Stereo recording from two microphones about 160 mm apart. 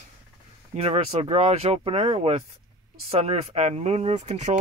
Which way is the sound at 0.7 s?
40° right (ahead or behind).